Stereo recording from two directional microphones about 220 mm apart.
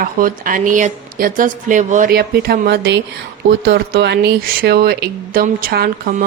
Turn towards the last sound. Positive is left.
turn(degrees=-45)  # may be behind; listen again after turning